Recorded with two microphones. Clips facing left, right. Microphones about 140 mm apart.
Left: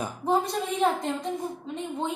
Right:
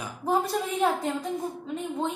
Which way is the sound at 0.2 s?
5° right (ahead or behind).